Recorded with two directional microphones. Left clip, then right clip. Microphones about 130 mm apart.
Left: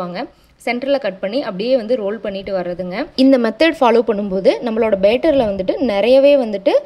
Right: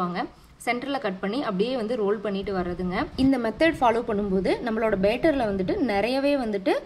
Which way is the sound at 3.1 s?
70° left (ahead or behind).